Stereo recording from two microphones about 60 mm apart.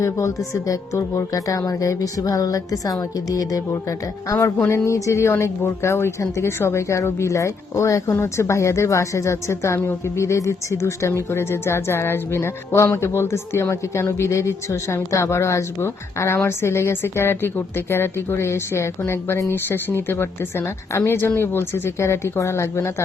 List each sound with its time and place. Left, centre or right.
0.0 s speech: left
4.7 s speech: left
5.3 s speech: left
8.1 s speech: left